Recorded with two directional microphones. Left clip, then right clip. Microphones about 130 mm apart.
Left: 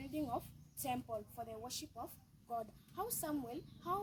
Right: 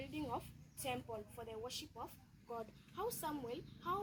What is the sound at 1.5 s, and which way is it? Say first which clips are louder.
Speech: even; 35° left (ahead or behind).